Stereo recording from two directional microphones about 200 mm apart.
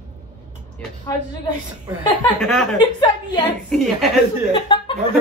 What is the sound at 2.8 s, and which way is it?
Speech, 20° left (ahead or behind).